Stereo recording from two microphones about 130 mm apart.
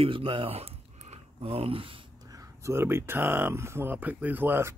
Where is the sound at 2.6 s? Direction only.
20° right (ahead or behind).